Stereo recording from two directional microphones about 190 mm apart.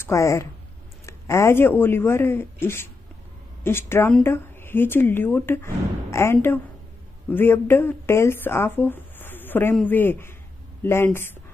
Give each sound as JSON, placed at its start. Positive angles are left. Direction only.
{"t": 0.0, "sound": "speech", "side_deg": 15}